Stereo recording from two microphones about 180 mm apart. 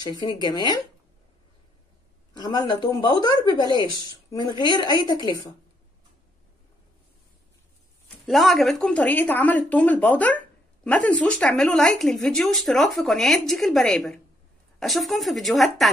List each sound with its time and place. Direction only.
0.0 s speech: 25° left (ahead or behind)
2.3 s speech: 25° left (ahead or behind)
8.3 s speech: centre (ahead or behind)